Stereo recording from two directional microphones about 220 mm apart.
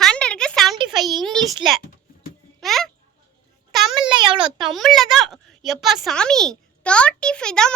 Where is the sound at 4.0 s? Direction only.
20° right (ahead or behind).